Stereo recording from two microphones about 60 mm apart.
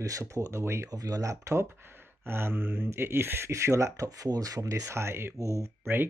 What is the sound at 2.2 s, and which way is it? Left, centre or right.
Speech, right.